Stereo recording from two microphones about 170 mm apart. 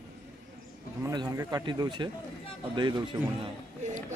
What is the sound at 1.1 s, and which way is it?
Speech, 20° right (ahead or behind).